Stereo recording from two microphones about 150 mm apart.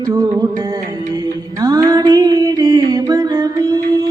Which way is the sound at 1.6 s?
25° right (ahead or behind).